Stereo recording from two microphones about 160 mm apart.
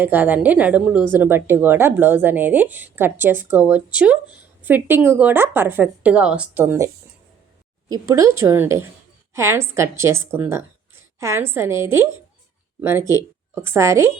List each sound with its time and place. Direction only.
0.0 s a woman's voice: 10° right (ahead or behind)